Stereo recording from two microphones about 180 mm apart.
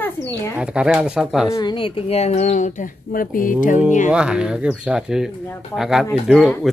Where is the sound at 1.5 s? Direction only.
25° left (ahead or behind); by 3.8 s 50° left (ahead or behind).